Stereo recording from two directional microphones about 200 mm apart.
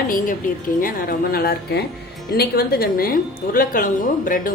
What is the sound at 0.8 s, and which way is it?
A woman's voice, 45° left (ahead or behind).